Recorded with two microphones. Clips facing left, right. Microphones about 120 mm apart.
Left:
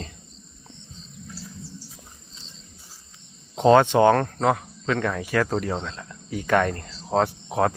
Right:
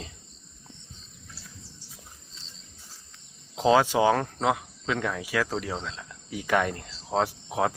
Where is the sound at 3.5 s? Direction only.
5° right (ahead or behind).